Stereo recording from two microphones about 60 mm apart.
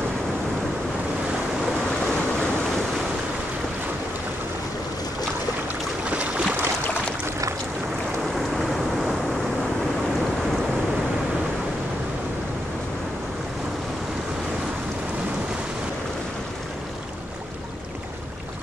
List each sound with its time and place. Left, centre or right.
6.0 s boat: right
8.4 s vehicle: centre